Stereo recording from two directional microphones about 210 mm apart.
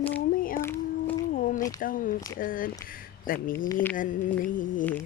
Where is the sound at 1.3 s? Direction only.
40° left (ahead or behind).